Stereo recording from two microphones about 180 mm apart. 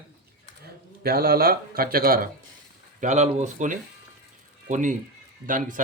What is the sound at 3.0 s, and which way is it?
A man's voice, 40° right (ahead or behind).